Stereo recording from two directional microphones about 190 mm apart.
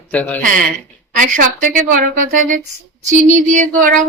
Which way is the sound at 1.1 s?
45° right (ahead or behind).